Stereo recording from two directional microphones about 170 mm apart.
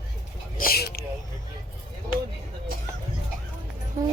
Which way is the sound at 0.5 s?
60° left (ahead or behind).